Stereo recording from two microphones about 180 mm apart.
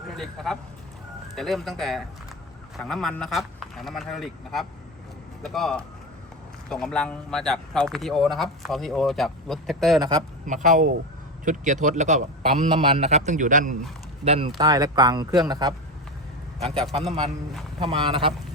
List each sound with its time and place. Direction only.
0.2 s a man's voice: centre (ahead or behind)
10.4 s a man's voice: 45° right (ahead or behind)
14.3 s speech: 30° right (ahead or behind)
14.7 s speech: 20° right (ahead or behind)
17.7 s speech: 25° right (ahead or behind)